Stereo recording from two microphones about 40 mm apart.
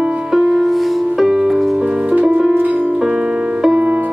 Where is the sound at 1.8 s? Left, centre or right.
Right.